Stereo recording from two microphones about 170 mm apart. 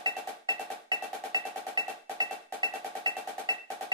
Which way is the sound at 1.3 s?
25° right (ahead or behind).